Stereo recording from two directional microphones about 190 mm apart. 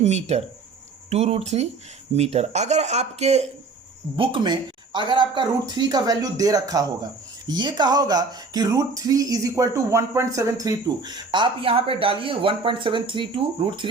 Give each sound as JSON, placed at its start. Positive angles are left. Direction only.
{"t": 0.0, "sound": "speech", "side_deg": -35}